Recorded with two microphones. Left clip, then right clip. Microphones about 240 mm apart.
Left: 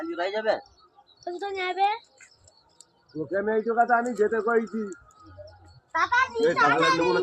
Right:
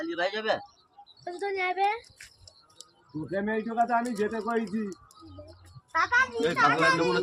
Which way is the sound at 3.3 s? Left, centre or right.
Right.